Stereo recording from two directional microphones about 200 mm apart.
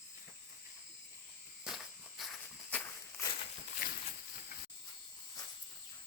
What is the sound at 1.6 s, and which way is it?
Walk, centre (ahead or behind).